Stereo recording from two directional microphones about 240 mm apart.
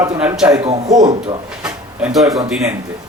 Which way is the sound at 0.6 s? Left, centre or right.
Right.